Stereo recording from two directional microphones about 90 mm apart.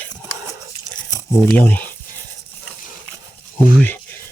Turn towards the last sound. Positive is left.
turn(degrees=20)  # may be behind; listen again after turning